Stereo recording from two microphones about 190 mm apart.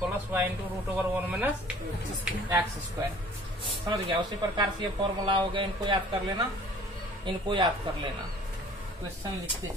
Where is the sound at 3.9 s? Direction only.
25° right (ahead or behind).